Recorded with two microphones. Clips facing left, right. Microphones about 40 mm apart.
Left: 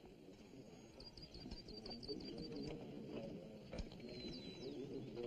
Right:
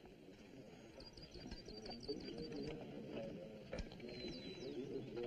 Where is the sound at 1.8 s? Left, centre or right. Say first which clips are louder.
Right 2 dB; centre.